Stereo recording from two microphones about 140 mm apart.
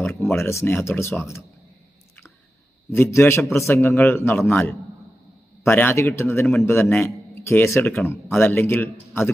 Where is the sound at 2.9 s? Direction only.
15° left (ahead or behind).